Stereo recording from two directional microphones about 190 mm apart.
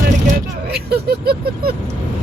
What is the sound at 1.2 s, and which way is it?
Vehicle, 55° right (ahead or behind).